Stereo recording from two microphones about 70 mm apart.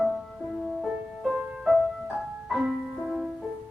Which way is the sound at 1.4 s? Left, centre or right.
Centre.